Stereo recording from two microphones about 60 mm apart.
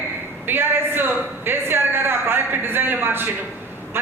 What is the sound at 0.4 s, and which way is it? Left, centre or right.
A man's voice, right.